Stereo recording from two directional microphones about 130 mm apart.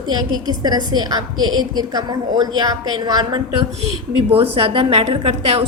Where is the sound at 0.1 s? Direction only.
30° right (ahead or behind).